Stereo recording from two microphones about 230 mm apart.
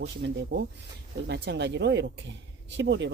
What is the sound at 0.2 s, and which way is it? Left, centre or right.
Speech, right.